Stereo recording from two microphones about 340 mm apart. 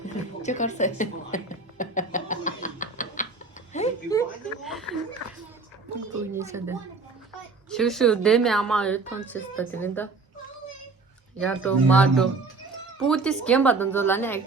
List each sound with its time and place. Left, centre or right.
0.0 s a sound: left
4.1 s chuckle: centre
6.3 s a woman's voice: centre
11.3 s a woman's voice: centre